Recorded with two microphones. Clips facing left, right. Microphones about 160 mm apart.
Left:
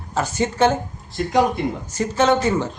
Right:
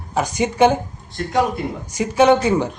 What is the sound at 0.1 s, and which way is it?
Speech, 15° right (ahead or behind).